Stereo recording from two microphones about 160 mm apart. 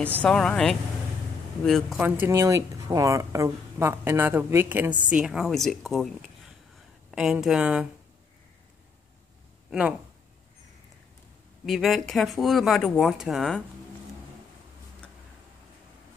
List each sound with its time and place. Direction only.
0.2 s speech: 5° left (ahead or behind)
2.0 s speech: 10° right (ahead or behind)
9.7 s speech: 5° right (ahead or behind)
11.6 s speech: centre (ahead or behind)